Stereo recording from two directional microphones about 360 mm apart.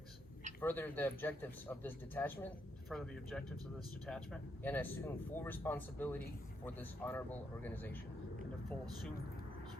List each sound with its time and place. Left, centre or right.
0.6 s speech: centre